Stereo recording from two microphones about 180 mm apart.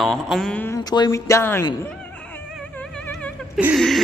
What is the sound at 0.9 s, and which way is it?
Speech, 20° left (ahead or behind).